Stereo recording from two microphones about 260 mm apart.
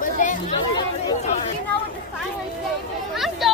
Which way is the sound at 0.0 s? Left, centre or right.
Left.